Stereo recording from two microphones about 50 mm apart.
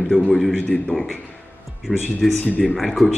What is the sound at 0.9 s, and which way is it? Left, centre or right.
Speech, left.